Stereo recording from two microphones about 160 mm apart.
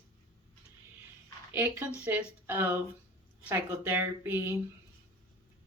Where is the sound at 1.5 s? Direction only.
10° right (ahead or behind).